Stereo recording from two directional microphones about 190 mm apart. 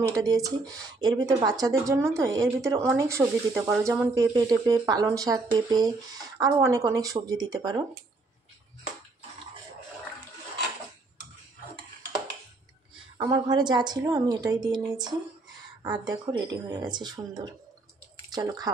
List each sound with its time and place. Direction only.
0.1 s speech: 20° right (ahead or behind)
13.2 s speech: 20° right (ahead or behind)